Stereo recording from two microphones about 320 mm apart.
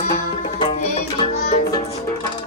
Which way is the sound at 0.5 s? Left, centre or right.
Centre.